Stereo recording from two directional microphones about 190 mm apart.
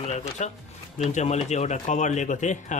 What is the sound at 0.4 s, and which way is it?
Speech, 40° left (ahead or behind).